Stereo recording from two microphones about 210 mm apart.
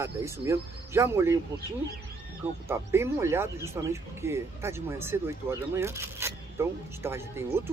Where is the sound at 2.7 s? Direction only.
10° right (ahead or behind).